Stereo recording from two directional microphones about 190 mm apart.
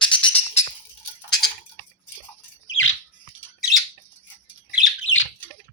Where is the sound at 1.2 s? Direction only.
5° left (ahead or behind).